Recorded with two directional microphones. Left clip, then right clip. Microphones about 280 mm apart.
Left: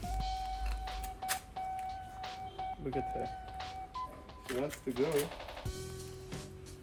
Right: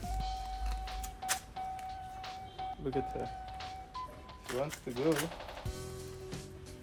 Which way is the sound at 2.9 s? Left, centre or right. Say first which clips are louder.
Even; centre.